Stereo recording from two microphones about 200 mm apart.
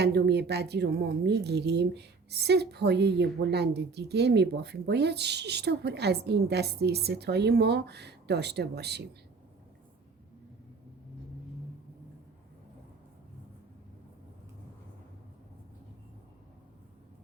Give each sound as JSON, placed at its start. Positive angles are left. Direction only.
{"t": 0.0, "sound": "a woman's voice", "side_deg": -55}